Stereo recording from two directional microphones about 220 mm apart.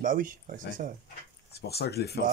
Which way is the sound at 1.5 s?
45° left (ahead or behind).